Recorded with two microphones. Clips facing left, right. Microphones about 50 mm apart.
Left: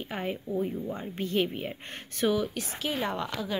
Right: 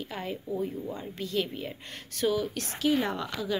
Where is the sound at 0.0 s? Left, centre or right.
Left.